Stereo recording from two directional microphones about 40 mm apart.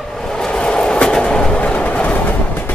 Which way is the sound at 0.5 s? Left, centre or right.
Left.